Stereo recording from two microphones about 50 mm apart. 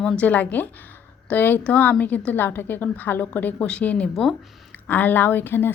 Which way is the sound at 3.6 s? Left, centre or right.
Left.